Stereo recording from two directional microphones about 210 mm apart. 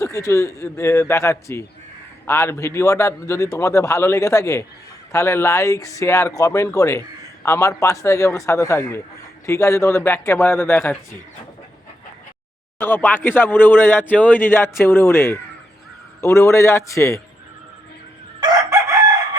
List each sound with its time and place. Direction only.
0.0 s speech: 15° left (ahead or behind)
12.8 s speech: 10° left (ahead or behind)
18.3 s chicken: 15° right (ahead or behind)